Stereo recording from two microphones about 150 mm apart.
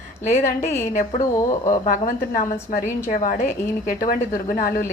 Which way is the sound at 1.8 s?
55° left (ahead or behind).